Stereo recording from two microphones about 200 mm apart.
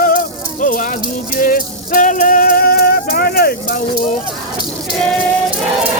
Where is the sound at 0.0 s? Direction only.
45° left (ahead or behind).